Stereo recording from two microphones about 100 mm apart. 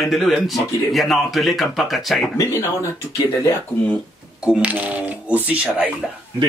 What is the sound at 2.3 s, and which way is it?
Speech, 30° left (ahead or behind).